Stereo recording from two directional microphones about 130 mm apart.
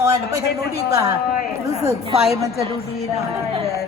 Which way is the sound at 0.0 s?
25° right (ahead or behind).